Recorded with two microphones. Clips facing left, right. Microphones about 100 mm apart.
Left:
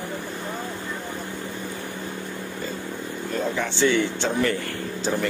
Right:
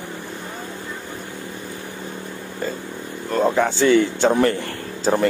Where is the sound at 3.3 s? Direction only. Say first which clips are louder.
Right 9 dB; 45° right (ahead or behind).